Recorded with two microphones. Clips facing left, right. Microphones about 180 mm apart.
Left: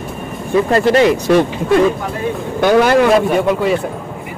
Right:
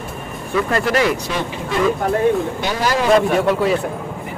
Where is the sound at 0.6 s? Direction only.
30° left (ahead or behind).